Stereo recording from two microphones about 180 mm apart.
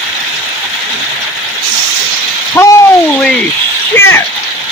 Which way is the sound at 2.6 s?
10° left (ahead or behind).